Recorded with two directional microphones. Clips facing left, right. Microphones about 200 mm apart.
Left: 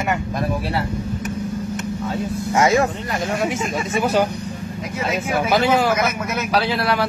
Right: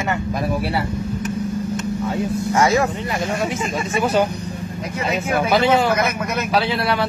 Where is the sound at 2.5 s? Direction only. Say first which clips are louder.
Left 1 dB; 20° left (ahead or behind).